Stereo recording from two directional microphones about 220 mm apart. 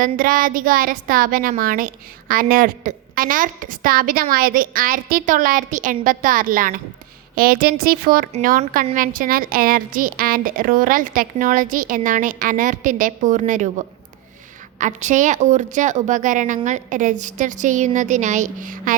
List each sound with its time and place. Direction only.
0.0 s a woman's voice: 40° right (ahead or behind)